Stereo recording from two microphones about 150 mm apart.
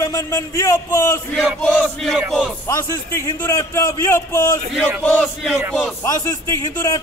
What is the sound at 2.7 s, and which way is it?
A man's voice, 20° left (ahead or behind).